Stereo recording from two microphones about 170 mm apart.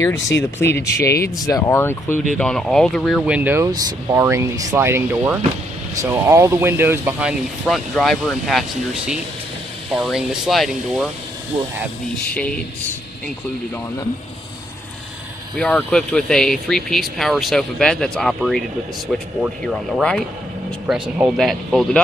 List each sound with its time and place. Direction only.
0.0 s speech: 15° left (ahead or behind); by 7.3 s 10° right (ahead or behind)
7.6 s speech: centre (ahead or behind)
12.3 s speech: 10° left (ahead or behind)
15.5 s speech: 5° left (ahead or behind)
20.8 s speech: 5° right (ahead or behind)